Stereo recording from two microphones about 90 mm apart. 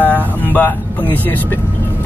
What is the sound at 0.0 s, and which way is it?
Vehicle, 20° left (ahead or behind).